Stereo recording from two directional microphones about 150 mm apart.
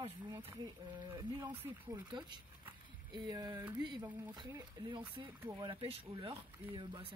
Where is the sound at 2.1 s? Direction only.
30° right (ahead or behind).